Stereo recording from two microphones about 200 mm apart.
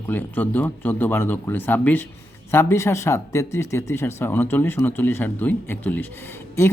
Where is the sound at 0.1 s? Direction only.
10° left (ahead or behind).